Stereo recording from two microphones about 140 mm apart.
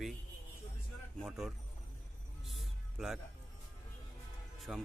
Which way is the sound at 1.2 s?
Centre (ahead or behind).